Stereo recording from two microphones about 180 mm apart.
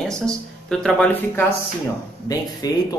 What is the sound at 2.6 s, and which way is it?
Speech, 20° left (ahead or behind).